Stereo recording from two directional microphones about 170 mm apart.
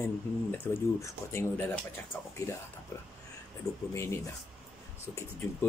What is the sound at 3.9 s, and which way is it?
Speech, 15° left (ahead or behind).